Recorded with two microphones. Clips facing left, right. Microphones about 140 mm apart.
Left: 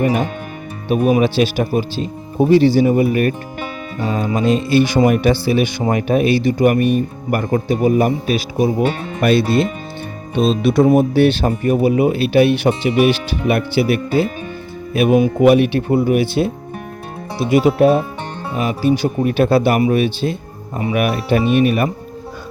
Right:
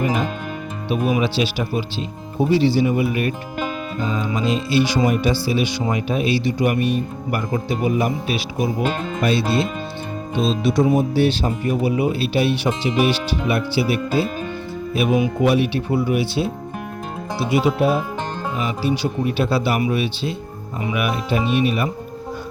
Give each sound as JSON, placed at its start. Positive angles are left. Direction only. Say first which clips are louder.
{"t": 0.0, "sound": "music", "louder": "left 4 dB", "side_deg": 60}
{"t": 0.9, "sound": "speech", "louder": "left 6 dB", "side_deg": 45}
{"t": 9.2, "sound": "speech", "louder": "left 6 dB", "side_deg": 55}
{"t": 17.5, "sound": "speech", "louder": "left 6 dB", "side_deg": 55}